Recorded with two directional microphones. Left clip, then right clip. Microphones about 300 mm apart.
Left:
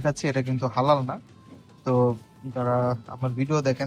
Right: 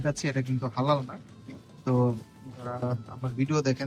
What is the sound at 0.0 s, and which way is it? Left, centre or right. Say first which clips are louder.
Speech: left 5 dB; centre.